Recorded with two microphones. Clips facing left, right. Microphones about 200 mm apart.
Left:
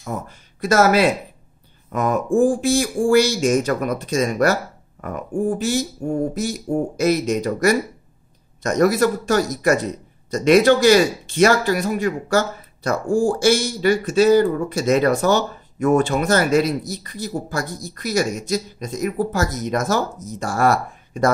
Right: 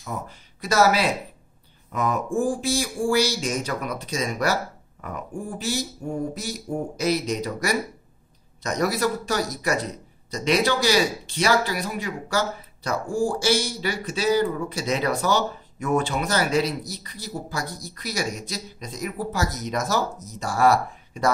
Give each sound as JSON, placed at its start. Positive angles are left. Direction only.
{"t": 0.0, "sound": "speech", "side_deg": 50}